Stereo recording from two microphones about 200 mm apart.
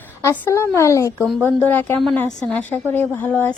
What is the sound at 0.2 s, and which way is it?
A woman's voice, 15° left (ahead or behind).